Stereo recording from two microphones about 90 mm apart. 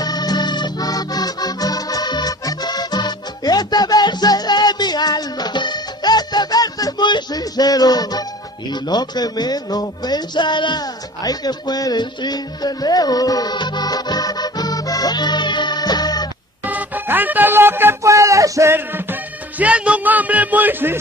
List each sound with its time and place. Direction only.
0.0 s music: 50° left (ahead or behind)
8.7 s speech: 50° left (ahead or behind)
16.6 s speech: 20° right (ahead or behind); by 18.7 s 35° right (ahead or behind)
18.7 s music: 25° right (ahead or behind)
19.6 s a man's voice: 15° right (ahead or behind)